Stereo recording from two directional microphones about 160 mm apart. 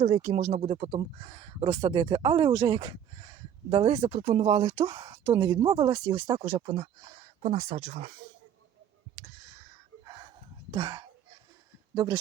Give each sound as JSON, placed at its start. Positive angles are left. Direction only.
{"t": 0.0, "sound": "speech", "side_deg": -45}
{"t": 10.7, "sound": "speech", "side_deg": -25}